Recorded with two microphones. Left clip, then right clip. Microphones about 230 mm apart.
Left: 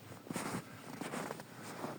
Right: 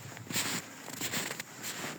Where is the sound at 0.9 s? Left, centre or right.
Right.